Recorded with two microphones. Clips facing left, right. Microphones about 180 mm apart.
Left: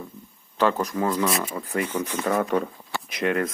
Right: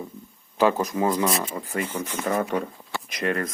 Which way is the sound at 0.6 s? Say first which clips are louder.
Right 1 dB; 15° right (ahead or behind).